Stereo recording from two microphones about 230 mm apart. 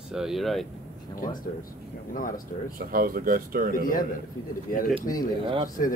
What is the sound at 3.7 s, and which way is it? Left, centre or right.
Speech, left.